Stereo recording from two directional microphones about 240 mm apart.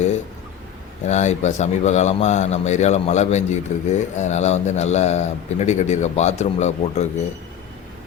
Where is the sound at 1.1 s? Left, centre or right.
Left.